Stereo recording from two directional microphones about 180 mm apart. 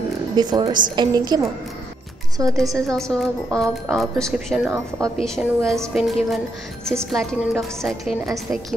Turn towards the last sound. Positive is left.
turn(degrees=0)  # may be behind; listen again after turning